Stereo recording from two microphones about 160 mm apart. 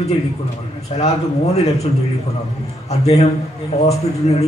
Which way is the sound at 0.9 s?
40° left (ahead or behind).